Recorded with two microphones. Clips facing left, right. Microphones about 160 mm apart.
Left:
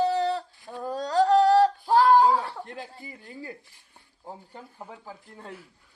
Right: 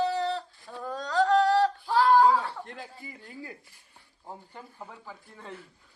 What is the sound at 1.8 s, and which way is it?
Speech, 40° left (ahead or behind).